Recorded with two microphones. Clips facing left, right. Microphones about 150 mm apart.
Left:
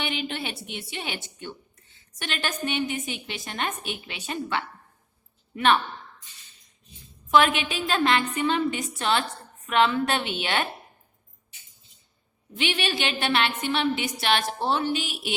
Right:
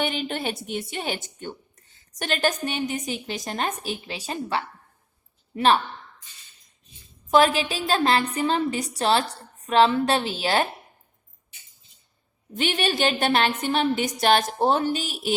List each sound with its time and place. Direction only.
0.0 s speech: 40° right (ahead or behind)
7.3 s speech: 35° right (ahead or behind)
12.5 s a woman's voice: 45° right (ahead or behind)